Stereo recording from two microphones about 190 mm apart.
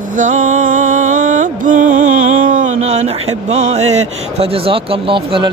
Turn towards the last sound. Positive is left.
turn(degrees=-25)  # may be behind; listen again after turning